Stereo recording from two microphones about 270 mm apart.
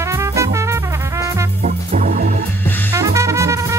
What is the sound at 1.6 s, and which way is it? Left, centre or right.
Music, right.